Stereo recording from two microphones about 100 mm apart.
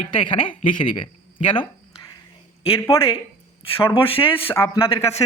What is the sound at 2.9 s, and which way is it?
Speech, 70° left (ahead or behind).